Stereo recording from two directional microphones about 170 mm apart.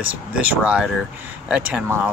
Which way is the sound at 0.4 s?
5° right (ahead or behind).